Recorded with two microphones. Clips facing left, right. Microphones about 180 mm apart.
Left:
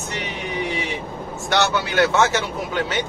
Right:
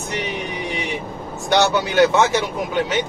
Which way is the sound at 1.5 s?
15° right (ahead or behind).